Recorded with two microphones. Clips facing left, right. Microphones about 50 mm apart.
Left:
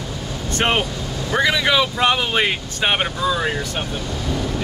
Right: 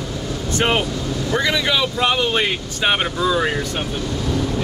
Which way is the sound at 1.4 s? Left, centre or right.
Centre.